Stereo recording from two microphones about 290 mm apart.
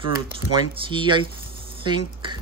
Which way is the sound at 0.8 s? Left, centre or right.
Centre.